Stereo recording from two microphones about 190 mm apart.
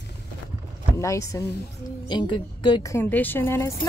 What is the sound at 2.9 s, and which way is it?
Speech, 10° left (ahead or behind).